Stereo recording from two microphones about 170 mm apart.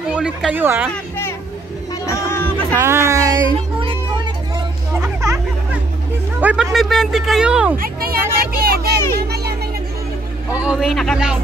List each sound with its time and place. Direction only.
0.1 s speech: 5° right (ahead or behind)
2.0 s speech: 15° left (ahead or behind)
2.8 s speech: 15° right (ahead or behind)
4.9 s music: 15° right (ahead or behind)
6.4 s speech: 5° right (ahead or behind)
7.7 s vehicle: 60° right (ahead or behind)
9.3 s children playing: 70° right (ahead or behind)
10.5 s speech: 5° right (ahead or behind)